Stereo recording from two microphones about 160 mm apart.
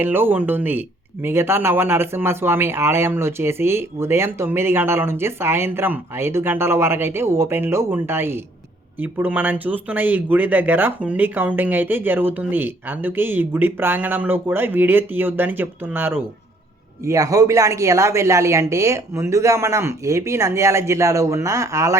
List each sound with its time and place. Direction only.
0.0 s speech: 15° right (ahead or behind)